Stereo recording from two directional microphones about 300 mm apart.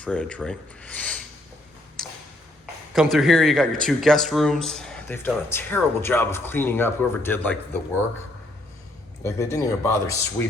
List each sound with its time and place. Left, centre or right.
0.0 s speech: centre
2.0 s a sound: centre
2.9 s speech: centre
9.2 s speech: centre